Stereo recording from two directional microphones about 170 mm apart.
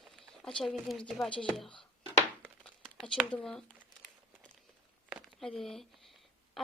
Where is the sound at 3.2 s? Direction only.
5° left (ahead or behind).